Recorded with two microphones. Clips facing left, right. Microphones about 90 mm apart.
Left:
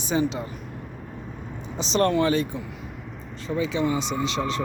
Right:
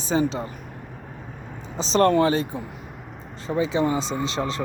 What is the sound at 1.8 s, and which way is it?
Speech, 35° right (ahead or behind).